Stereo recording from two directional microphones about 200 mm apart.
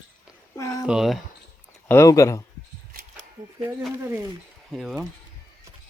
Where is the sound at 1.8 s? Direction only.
15° left (ahead or behind).